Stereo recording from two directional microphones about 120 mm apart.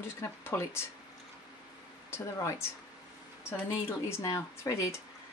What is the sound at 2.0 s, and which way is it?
Speech, 25° left (ahead or behind).